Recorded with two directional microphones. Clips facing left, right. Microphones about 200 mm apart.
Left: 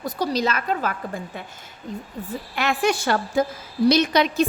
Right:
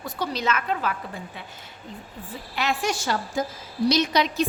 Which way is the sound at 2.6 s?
55° left (ahead or behind).